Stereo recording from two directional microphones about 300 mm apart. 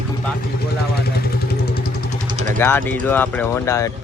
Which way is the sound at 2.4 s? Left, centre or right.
Right.